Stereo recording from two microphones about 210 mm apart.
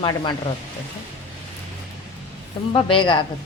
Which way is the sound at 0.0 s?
20° left (ahead or behind).